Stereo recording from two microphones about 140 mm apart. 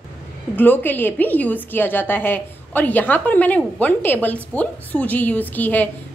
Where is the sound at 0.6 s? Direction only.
15° left (ahead or behind).